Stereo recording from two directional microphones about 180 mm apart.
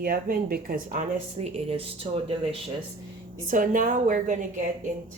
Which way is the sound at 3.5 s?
50° right (ahead or behind).